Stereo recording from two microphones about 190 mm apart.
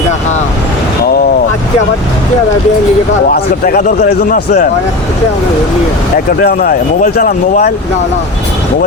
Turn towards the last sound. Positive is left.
turn(degrees=50)  # may be behind; listen again after turning